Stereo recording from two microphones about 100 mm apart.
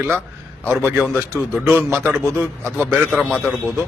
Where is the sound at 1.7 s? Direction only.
20° right (ahead or behind).